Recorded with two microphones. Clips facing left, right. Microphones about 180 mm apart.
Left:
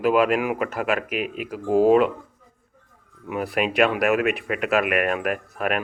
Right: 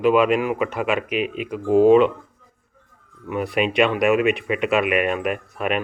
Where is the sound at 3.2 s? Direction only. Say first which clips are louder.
Right 2 dB; 5° left (ahead or behind).